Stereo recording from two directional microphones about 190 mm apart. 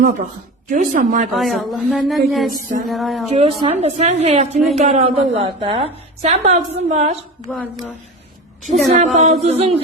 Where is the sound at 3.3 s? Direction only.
30° right (ahead or behind).